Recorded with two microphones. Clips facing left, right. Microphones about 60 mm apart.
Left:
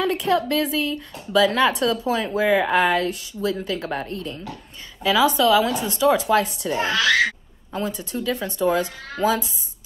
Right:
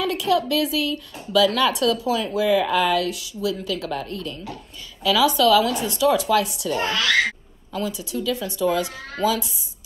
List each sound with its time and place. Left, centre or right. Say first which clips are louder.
0.0 s a woman's voice: even; left